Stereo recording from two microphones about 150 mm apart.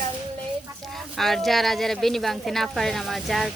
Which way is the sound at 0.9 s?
Centre (ahead or behind).